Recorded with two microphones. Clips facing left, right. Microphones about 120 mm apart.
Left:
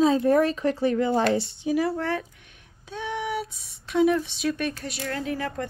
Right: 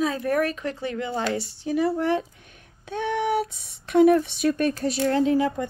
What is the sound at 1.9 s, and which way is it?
Speech, 20° right (ahead or behind).